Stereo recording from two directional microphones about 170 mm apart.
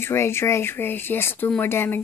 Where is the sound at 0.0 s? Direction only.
15° left (ahead or behind).